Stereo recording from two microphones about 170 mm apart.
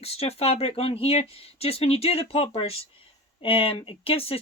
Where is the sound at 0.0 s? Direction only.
35° left (ahead or behind).